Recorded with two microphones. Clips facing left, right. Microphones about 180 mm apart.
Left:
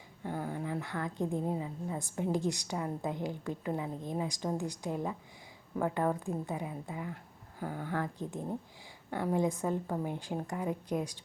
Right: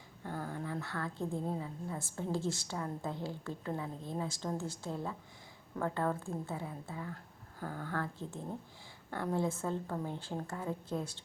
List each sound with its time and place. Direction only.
0.3 s a woman's voice: 15° left (ahead or behind)